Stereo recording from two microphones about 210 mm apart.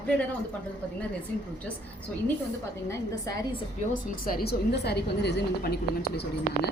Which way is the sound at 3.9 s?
45° left (ahead or behind).